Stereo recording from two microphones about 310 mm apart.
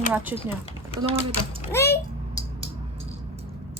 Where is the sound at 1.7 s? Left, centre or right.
Centre.